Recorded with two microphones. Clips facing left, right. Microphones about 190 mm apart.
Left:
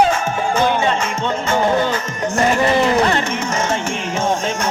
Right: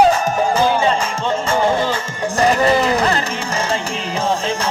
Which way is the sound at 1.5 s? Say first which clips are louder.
Left 1 dB; 30° right (ahead or behind).